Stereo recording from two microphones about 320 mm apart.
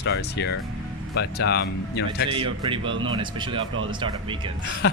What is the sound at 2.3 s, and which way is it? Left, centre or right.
Speech, centre.